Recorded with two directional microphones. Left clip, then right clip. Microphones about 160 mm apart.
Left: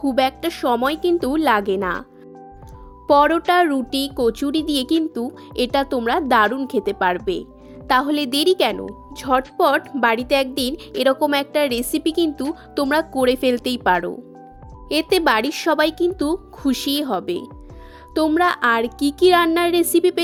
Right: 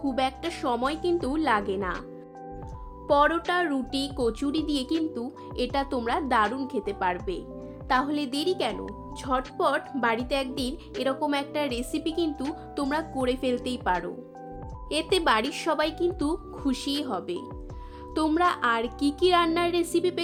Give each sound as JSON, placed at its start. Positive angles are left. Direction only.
{"t": 0.1, "sound": "a woman's voice", "side_deg": 65}
{"t": 3.1, "sound": "a woman's voice", "side_deg": 50}
{"t": 14.8, "sound": "speech", "side_deg": 50}
{"t": 18.1, "sound": "speech", "side_deg": 40}